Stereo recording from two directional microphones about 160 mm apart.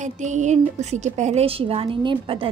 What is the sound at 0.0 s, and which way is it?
A woman's voice, 50° right (ahead or behind).